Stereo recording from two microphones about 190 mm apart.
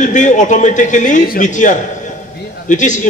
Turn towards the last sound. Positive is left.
turn(degrees=40)  # may be behind; listen again after turning